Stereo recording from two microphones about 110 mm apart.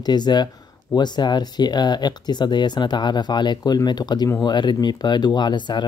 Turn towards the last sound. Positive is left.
turn(degrees=40)  # may be behind; listen again after turning